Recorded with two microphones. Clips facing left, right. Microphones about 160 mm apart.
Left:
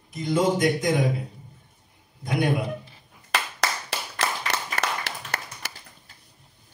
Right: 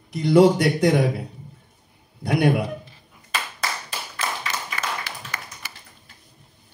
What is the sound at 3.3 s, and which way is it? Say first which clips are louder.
Clapping: left 2 dB; 75° left (ahead or behind).